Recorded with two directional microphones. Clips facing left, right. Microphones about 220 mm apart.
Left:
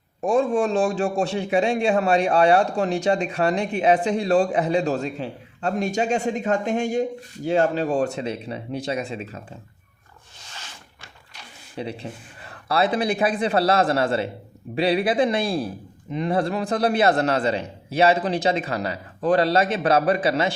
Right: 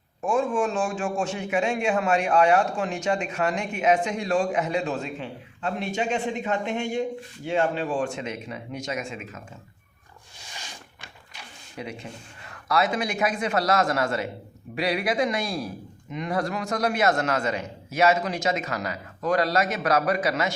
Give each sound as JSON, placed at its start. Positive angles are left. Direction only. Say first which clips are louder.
{"t": 0.2, "sound": "a man's voice", "louder": "left 4 dB", "side_deg": 35}
{"t": 10.5, "sound": "a sound", "louder": "right 1 dB", "side_deg": -15}
{"t": 11.8, "sound": "a man's voice", "louder": "left 5 dB", "side_deg": 30}